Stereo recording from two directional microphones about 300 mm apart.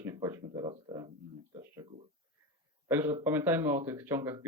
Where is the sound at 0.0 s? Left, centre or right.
Centre.